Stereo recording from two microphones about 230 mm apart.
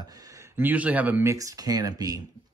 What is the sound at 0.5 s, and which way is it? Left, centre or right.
Speech, centre.